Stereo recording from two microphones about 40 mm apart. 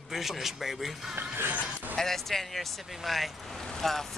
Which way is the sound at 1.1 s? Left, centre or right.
Right.